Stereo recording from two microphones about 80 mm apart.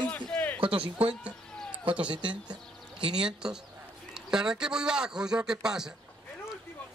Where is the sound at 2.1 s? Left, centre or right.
Right.